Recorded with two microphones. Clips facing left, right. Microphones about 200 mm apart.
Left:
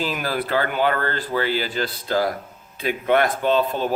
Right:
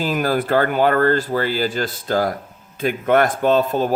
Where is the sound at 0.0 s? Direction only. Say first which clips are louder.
Right 5 dB; 45° right (ahead or behind).